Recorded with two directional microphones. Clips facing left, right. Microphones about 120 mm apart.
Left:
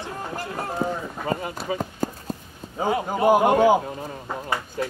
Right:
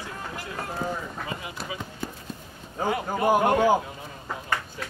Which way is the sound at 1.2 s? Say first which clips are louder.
Left 8 dB; 45° left (ahead or behind).